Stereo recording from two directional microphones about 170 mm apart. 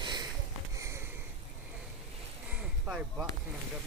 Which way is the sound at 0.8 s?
15° right (ahead or behind).